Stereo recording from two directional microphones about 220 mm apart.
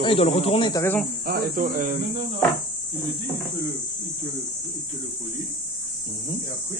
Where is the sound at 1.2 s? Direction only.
40° right (ahead or behind).